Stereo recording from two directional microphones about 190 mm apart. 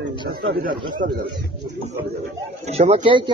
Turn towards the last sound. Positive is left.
turn(degrees=-25)  # may be behind; listen again after turning